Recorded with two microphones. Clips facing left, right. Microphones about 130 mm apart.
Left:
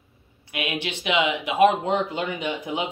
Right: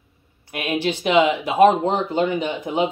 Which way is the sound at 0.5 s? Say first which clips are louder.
Right 6 dB; 40° right (ahead or behind).